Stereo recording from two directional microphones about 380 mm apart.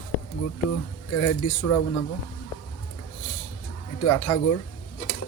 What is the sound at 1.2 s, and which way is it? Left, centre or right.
Speech, left.